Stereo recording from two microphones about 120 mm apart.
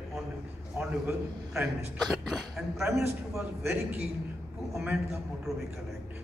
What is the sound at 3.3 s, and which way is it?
A man's voice, 15° right (ahead or behind).